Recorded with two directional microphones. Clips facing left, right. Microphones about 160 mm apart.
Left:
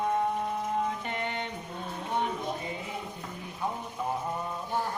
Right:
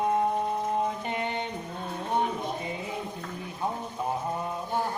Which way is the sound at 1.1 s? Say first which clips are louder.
Right 3 dB; 20° right (ahead or behind).